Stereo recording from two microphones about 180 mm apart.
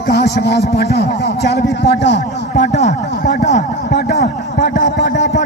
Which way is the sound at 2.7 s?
40° left (ahead or behind).